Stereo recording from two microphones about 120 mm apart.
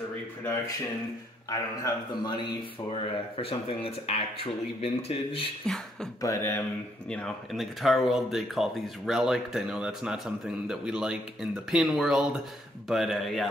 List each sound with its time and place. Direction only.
1.5 s speech: 35° left (ahead or behind); by 5.5 s 50° left (ahead or behind)
6.2 s speech: 25° left (ahead or behind)
7.1 s speech: 5° left (ahead or behind)